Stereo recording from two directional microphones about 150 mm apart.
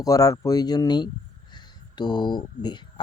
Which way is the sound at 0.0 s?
25° left (ahead or behind).